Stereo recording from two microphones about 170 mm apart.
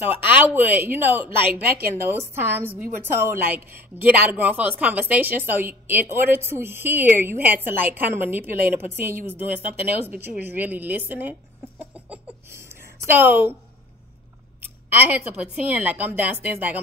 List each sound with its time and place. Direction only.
0.0 s a woman's voice: 10° right (ahead or behind)
1.6 s a woman's voice: 65° right (ahead or behind)
2.0 s a woman's voice: 15° right (ahead or behind)
11.8 s a sound: 10° right (ahead or behind)
14.6 s a woman's voice: 10° right (ahead or behind)